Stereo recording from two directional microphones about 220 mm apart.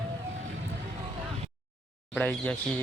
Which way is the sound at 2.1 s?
5° left (ahead or behind).